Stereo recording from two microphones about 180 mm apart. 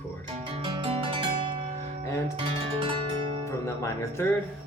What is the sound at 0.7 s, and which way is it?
Music, 25° right (ahead or behind).